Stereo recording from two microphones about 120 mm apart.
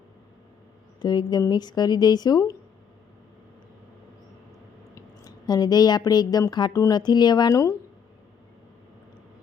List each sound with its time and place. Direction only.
1.0 s a woman's voice: 35° left (ahead or behind)
4.9 s speech: 30° left (ahead or behind)